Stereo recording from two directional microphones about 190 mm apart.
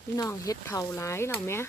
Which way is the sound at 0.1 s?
15° left (ahead or behind).